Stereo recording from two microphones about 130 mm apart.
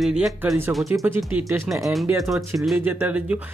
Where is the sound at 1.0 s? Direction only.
15° right (ahead or behind).